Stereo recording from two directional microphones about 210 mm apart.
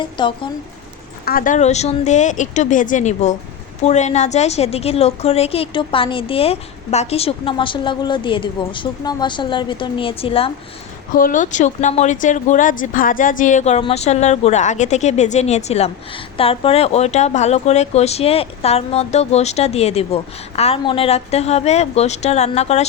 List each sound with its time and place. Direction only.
0.0 s a woman's voice: 25° left (ahead or behind)
1.2 s a woman's voice: 45° left (ahead or behind); by 10.5 s 25° left (ahead or behind)
11.2 s speech: 40° left (ahead or behind)